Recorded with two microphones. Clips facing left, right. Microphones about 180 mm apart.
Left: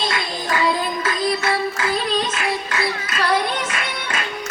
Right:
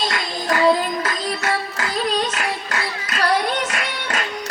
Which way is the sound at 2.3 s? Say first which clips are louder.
Left 2 dB; 40° right (ahead or behind).